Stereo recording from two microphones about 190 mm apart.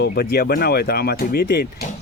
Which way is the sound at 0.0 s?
60° left (ahead or behind).